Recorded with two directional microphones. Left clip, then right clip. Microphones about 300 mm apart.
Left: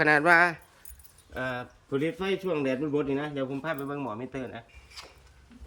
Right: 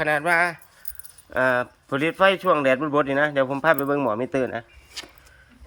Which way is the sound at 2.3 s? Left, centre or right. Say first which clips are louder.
Right 9 dB; centre.